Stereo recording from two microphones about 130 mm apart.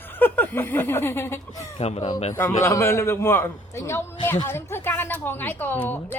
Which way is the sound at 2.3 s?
20° left (ahead or behind).